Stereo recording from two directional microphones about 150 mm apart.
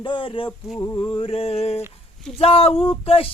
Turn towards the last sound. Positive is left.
turn(degrees=40)  # may be behind; listen again after turning